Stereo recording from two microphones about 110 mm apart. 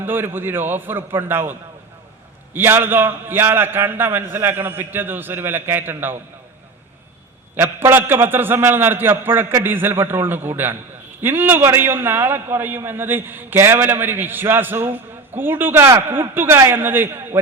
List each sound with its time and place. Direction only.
0.0 s a man's voice: 20° right (ahead or behind)
7.5 s a man's voice: 20° right (ahead or behind)